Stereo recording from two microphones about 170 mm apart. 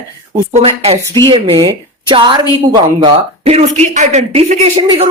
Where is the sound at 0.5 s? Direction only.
35° right (ahead or behind).